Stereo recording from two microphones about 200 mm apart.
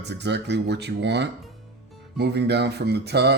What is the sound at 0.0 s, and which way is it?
Speech, 60° right (ahead or behind).